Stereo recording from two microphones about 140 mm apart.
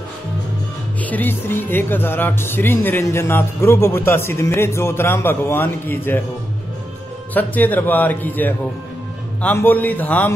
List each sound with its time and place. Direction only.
1.0 s speech: 10° left (ahead or behind)
7.3 s speech: 15° left (ahead or behind)